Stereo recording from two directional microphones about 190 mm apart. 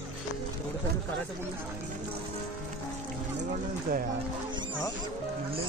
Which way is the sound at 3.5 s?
45° right (ahead or behind).